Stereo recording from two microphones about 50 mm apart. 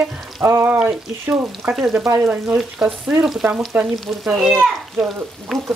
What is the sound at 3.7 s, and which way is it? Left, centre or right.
Frying, right.